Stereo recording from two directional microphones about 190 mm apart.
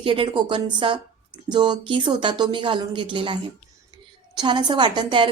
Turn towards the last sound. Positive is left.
turn(degrees=-25)  # may be behind; listen again after turning